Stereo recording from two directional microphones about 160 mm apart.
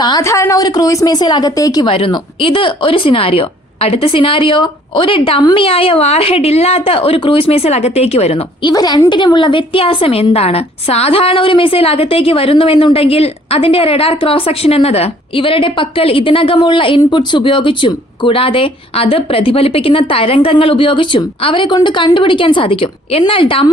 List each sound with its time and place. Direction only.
0.0 s speech: 20° left (ahead or behind)
1.9 s a woman's voice: 35° left (ahead or behind)
8.7 s a woman's voice: 25° left (ahead or behind)